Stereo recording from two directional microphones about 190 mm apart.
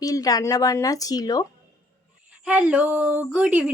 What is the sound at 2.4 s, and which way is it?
Speech, 5° right (ahead or behind).